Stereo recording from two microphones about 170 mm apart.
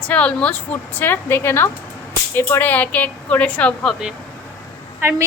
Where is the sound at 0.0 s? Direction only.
10° left (ahead or behind).